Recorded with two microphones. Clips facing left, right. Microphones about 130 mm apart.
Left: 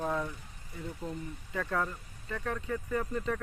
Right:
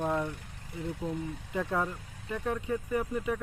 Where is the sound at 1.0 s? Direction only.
20° right (ahead or behind).